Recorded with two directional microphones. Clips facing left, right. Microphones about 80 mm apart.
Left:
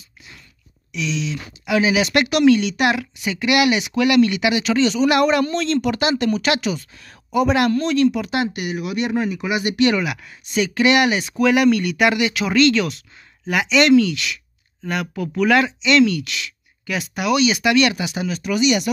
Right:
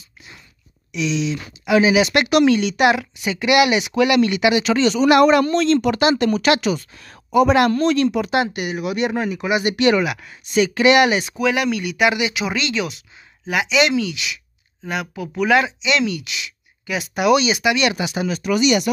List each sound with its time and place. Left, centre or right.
0.9 s speech: centre
2.2 s speech: right
2.8 s a woman's voice: centre; by 8.3 s right
8.3 s speech: right
18.4 s speech: right